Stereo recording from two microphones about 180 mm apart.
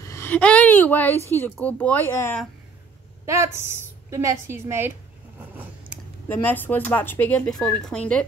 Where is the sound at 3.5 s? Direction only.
15° right (ahead or behind).